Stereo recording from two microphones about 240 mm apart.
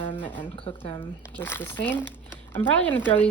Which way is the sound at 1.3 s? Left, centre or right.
Centre.